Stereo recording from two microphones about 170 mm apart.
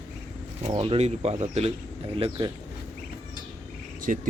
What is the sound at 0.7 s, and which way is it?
Speech, 35° right (ahead or behind).